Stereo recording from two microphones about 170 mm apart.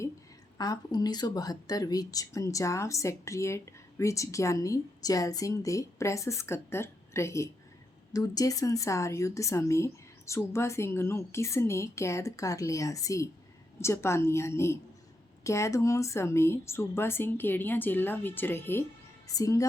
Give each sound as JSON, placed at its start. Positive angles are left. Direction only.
{"t": 0.6, "sound": "speech", "side_deg": 25}